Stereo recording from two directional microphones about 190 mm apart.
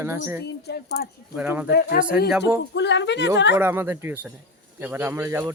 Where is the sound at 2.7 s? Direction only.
65° left (ahead or behind).